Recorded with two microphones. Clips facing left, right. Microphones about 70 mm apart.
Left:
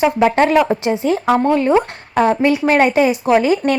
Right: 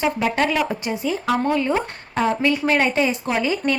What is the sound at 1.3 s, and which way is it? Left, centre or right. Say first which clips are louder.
Speech: left 5 dB; left.